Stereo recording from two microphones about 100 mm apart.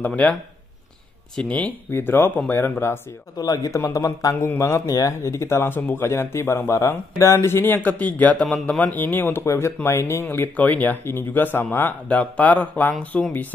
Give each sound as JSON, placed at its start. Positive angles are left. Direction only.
{"t": 0.0, "sound": "speech", "side_deg": 15}
{"t": 1.3, "sound": "speech", "side_deg": 10}
{"t": 1.9, "sound": "speech", "side_deg": 25}
{"t": 3.3, "sound": "speech", "side_deg": 40}